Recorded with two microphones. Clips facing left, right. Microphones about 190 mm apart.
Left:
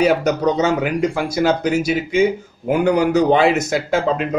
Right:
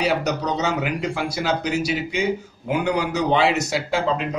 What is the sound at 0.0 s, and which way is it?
Speech, 50° left (ahead or behind).